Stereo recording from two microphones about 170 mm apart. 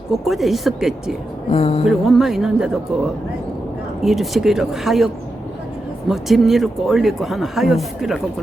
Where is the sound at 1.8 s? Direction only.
Centre (ahead or behind).